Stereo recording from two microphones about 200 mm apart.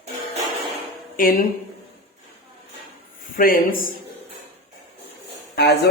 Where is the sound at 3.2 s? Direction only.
45° left (ahead or behind).